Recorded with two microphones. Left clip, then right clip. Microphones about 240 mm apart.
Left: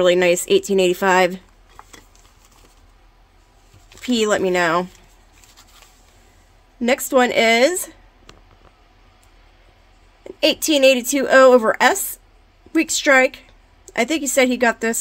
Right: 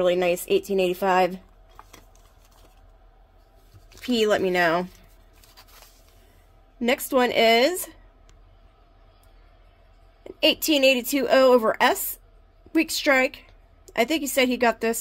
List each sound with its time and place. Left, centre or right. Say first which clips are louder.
0.0 s speech: left 7 dB; left
4.0 s speech: left 3 dB; centre
6.8 s speech: left 5 dB; centre
10.2 s a woman's voice: left 3 dB; centre